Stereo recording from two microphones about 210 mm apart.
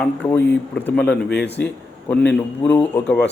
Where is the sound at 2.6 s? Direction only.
10° left (ahead or behind).